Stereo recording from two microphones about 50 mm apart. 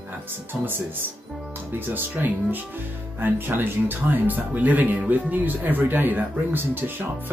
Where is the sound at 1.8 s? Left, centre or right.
Right.